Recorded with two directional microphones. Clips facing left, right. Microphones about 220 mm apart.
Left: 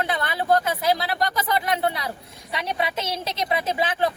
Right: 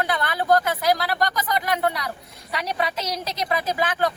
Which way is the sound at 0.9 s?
25° left (ahead or behind).